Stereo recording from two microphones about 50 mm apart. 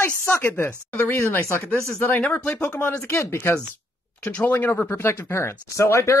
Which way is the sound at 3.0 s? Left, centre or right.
Left.